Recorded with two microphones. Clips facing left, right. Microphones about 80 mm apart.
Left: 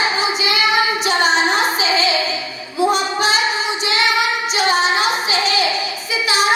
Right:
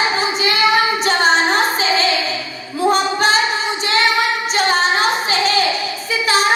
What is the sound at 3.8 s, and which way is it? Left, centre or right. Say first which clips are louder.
Child singing: right 2 dB; right.